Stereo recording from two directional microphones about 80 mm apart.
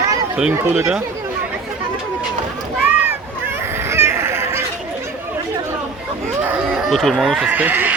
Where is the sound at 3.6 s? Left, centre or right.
Right.